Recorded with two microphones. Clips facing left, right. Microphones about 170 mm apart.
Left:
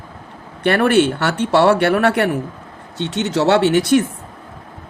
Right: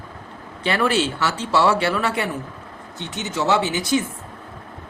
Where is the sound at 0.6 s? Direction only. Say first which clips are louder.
Left 7 dB; 60° left (ahead or behind).